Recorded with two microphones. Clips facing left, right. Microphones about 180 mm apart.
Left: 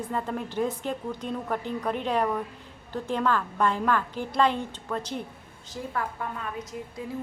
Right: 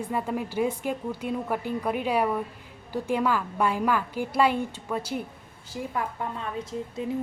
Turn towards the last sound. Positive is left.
turn(degrees=-25)  # may be behind; listen again after turning